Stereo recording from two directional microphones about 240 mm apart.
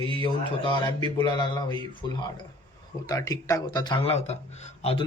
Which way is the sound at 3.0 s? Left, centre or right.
Centre.